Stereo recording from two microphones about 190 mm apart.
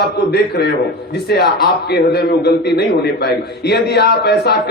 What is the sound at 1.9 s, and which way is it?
A man's voice, 60° left (ahead or behind).